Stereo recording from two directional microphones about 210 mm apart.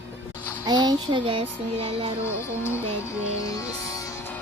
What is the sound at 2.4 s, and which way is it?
Music, 10° left (ahead or behind).